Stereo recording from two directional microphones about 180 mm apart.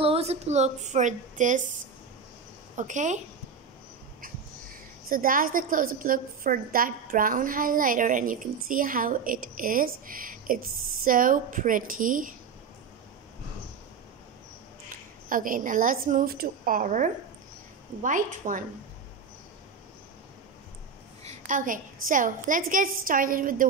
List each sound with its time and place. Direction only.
0.0 s speech: 35° right (ahead or behind)
2.7 s a woman's voice: 40° right (ahead or behind)
5.1 s a woman's voice: 50° right (ahead or behind)
15.2 s a woman's voice: 50° right (ahead or behind)
21.2 s a woman's voice: 40° right (ahead or behind)